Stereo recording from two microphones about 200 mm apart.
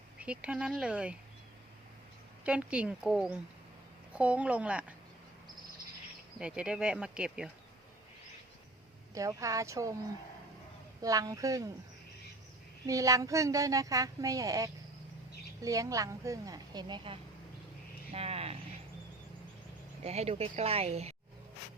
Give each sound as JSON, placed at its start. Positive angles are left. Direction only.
{"t": 0.2, "sound": "speech", "side_deg": -5}
{"t": 2.4, "sound": "a woman's voice", "side_deg": -5}
{"t": 6.4, "sound": "speech", "side_deg": -5}
{"t": 9.1, "sound": "a woman's voice", "side_deg": -15}
{"t": 11.0, "sound": "a woman's voice", "side_deg": -15}
{"t": 12.8, "sound": "a woman's voice", "side_deg": -15}
{"t": 20.1, "sound": "speech", "side_deg": -30}